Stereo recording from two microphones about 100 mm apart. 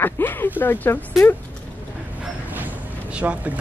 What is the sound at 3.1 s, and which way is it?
Speech, 15° right (ahead or behind).